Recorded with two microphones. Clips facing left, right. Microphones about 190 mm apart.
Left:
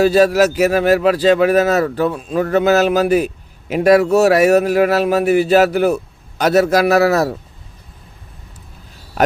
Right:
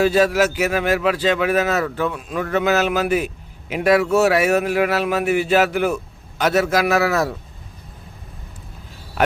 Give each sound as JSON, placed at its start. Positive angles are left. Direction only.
{"t": 0.0, "sound": "speech", "side_deg": 40}